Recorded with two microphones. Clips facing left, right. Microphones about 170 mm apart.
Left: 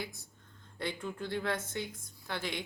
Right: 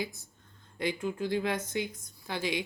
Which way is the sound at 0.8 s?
15° right (ahead or behind).